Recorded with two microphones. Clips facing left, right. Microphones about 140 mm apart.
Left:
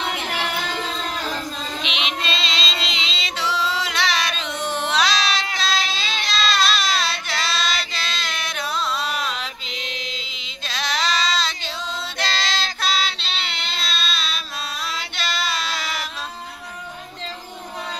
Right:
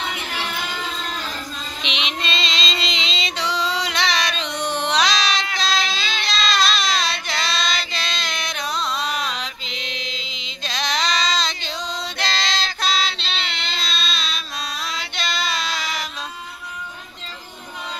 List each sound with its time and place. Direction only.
1.8 s female singing: 5° left (ahead or behind)
6.1 s child singing: 5° left (ahead or behind)
15.1 s music: 5° left (ahead or behind)